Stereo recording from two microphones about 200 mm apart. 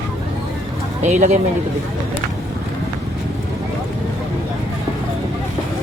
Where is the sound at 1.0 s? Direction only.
35° right (ahead or behind).